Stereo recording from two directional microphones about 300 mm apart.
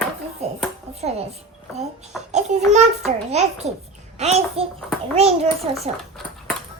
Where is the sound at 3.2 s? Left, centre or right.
Right.